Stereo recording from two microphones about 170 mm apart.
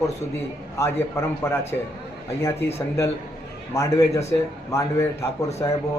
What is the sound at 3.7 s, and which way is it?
A man's voice, 15° left (ahead or behind).